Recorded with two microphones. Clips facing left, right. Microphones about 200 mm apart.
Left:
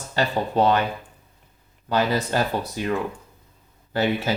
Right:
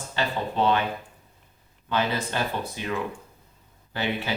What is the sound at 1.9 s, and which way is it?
Speech, 40° left (ahead or behind).